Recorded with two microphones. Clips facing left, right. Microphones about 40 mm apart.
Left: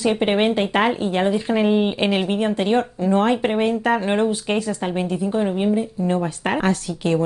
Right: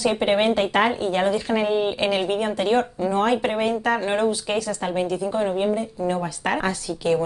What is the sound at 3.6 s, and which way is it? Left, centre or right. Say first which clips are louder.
Speech: left 2 dB; left.